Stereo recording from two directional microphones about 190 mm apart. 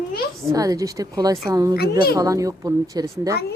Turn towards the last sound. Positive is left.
turn(degrees=-15)  # may be behind; listen again after turning